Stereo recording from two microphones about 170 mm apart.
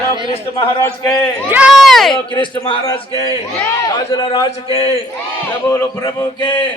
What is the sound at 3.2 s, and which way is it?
A man's voice, 20° left (ahead or behind).